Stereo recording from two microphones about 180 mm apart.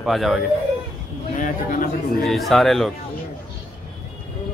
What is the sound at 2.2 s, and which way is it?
Speech, centre (ahead or behind).